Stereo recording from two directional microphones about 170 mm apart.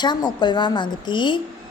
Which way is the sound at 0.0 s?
25° left (ahead or behind).